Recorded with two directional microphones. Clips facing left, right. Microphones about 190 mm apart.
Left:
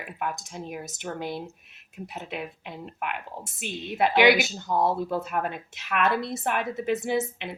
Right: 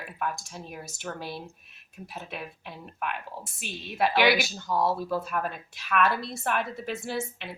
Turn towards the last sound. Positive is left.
turn(degrees=20)  # may be behind; listen again after turning